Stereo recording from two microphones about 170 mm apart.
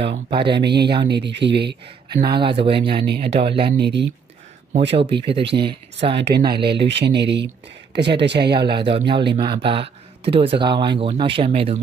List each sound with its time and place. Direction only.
0.0 s speech: 30° right (ahead or behind)
0.6 s speech: 80° right
2.3 s speech: 30° right (ahead or behind)
3.7 s speech: 80° right
5.1 s speech: 30° right (ahead or behind)
6.1 s speech: 80° right
8.6 s speech: 30° right (ahead or behind)